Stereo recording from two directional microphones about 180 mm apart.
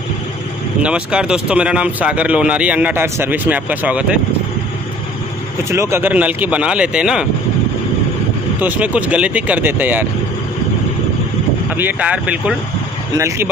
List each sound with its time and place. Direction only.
0.8 s speech: 5° right (ahead or behind)
5.7 s speech: 15° right (ahead or behind)
8.5 s speech: 10° right (ahead or behind)
11.7 s speech: 10° right (ahead or behind)